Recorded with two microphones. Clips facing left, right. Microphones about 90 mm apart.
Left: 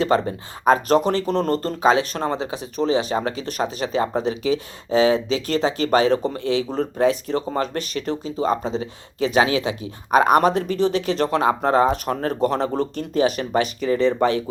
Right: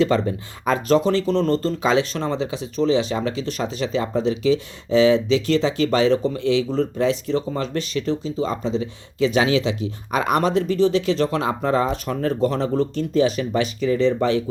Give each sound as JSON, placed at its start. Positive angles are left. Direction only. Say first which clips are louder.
{"t": 0.0, "sound": "speech", "louder": "right 1 dB", "side_deg": 40}